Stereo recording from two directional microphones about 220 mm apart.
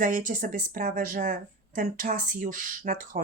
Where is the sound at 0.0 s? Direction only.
40° right (ahead or behind).